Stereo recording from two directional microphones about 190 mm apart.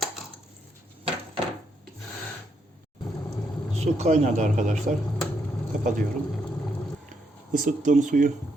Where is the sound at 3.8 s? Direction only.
35° right (ahead or behind).